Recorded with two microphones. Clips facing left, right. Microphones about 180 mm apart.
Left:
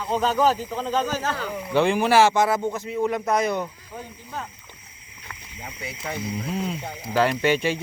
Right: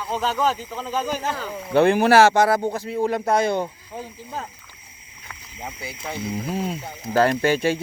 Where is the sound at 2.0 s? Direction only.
65° right (ahead or behind).